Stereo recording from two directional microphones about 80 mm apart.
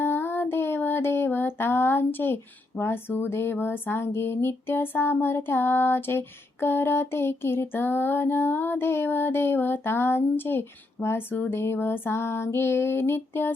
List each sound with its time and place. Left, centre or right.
0.0 s child singing: left